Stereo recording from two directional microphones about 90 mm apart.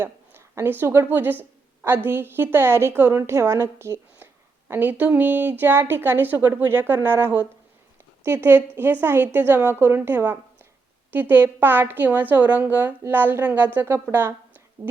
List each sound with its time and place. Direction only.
0.0 s a woman's voice: 25° right (ahead or behind)
4.7 s a woman's voice: 20° right (ahead or behind)